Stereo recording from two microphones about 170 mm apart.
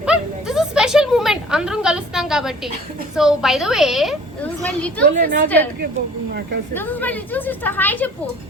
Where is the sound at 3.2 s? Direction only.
Centre (ahead or behind).